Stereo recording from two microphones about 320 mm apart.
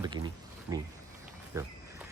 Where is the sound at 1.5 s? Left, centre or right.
Centre.